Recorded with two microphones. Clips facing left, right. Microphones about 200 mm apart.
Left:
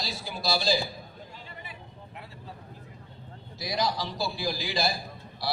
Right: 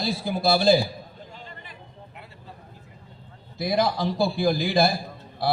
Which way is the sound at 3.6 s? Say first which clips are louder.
Right 7 dB; 55° right (ahead or behind).